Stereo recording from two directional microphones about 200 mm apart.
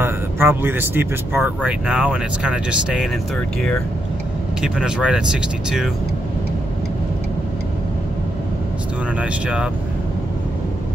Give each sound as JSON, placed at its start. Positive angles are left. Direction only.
{"t": 0.0, "sound": "speech", "side_deg": -10}
{"t": 4.6, "sound": "speech", "side_deg": -5}
{"t": 9.2, "sound": "speech", "side_deg": -5}